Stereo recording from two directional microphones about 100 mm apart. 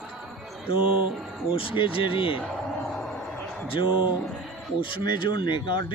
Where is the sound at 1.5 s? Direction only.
60° left (ahead or behind).